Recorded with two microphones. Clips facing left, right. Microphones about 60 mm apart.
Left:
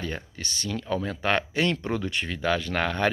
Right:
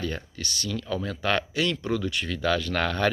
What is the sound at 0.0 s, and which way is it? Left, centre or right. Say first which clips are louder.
A man's voice: right 1 dB; left.